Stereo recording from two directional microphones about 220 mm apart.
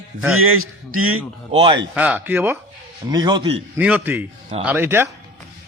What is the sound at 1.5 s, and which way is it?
Speech, 25° right (ahead or behind).